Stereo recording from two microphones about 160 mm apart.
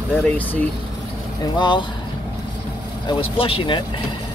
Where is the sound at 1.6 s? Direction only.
30° left (ahead or behind).